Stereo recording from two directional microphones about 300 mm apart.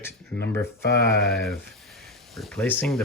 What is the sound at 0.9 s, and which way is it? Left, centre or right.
Speech, right.